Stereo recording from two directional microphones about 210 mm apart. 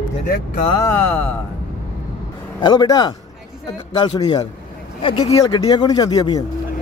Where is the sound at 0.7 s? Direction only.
15° left (ahead or behind).